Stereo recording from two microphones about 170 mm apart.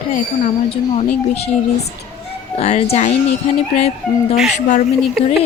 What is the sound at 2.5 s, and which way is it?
Speech, 40° left (ahead or behind).